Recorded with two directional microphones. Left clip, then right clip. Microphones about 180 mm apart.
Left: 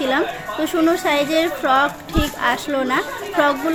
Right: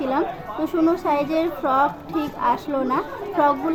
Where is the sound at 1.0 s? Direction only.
15° left (ahead or behind).